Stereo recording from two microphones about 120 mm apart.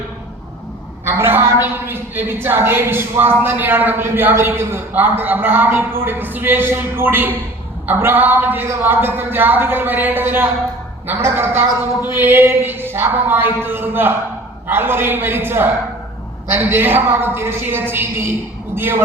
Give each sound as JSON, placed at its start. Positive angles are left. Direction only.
{"t": 1.0, "sound": "a woman's voice", "side_deg": -20}